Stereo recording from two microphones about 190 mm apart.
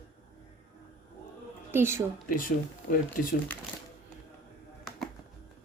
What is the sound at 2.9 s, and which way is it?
Speech, 45° left (ahead or behind).